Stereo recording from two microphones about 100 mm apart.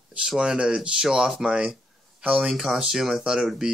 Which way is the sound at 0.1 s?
5° right (ahead or behind).